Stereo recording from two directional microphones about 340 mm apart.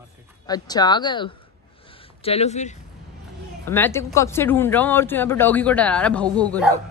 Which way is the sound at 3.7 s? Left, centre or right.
Centre.